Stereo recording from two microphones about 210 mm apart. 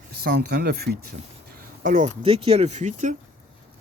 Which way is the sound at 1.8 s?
35° right (ahead or behind).